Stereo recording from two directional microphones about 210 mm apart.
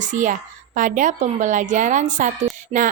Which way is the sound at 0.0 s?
35° right (ahead or behind).